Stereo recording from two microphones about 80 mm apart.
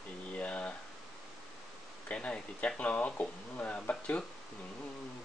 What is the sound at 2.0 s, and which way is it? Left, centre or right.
Speech, centre.